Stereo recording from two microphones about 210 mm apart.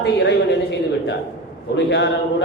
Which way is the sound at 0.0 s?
55° left (ahead or behind).